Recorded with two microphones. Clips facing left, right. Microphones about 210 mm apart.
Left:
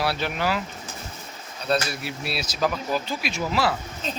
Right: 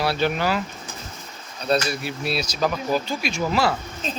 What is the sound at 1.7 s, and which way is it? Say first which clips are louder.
Speech: right 3 dB; centre (ahead or behind).